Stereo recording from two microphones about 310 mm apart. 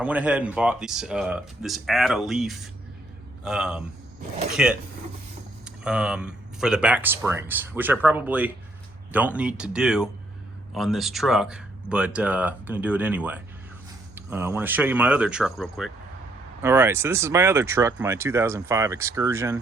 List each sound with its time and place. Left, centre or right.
0.0 s speech: centre